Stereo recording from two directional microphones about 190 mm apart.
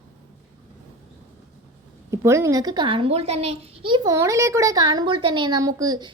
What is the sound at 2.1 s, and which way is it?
A child's voice, 15° right (ahead or behind).